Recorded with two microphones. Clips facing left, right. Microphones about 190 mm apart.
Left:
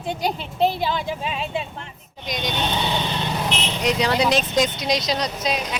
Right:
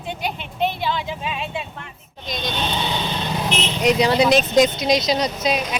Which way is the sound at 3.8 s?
10° right (ahead or behind).